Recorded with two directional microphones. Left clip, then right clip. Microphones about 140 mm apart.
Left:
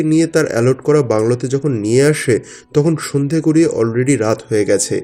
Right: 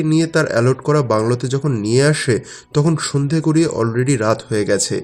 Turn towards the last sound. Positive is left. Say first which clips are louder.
# left 3 dB
turn(degrees=20)  # may be behind; listen again after turning